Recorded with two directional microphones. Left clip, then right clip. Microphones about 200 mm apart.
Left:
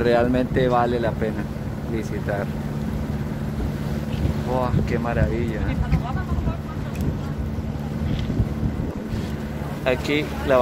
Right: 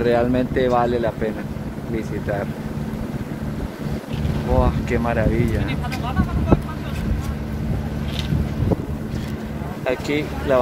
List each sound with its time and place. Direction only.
0.0 s speech: 5° right (ahead or behind)
4.6 s speech: 20° right (ahead or behind)
9.8 s speech: centre (ahead or behind)